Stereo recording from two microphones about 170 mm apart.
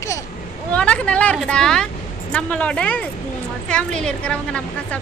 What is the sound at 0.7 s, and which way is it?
A woman's voice, 5° left (ahead or behind).